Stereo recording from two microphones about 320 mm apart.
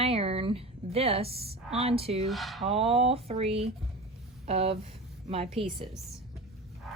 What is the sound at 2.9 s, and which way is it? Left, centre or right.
Speech, centre.